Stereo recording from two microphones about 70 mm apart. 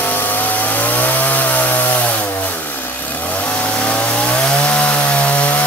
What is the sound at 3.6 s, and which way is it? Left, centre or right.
Vehicle, centre.